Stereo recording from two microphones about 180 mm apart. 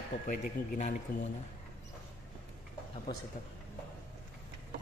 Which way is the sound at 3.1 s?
25° left (ahead or behind).